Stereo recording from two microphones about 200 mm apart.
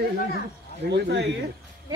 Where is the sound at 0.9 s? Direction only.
60° right (ahead or behind).